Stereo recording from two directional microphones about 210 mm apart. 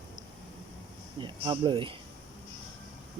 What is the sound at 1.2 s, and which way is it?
Speech, 20° right (ahead or behind).